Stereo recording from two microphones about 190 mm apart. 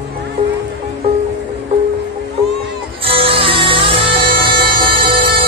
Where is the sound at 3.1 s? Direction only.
30° right (ahead or behind).